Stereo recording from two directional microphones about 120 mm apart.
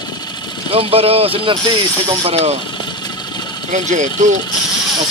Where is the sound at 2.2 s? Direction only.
60° right (ahead or behind).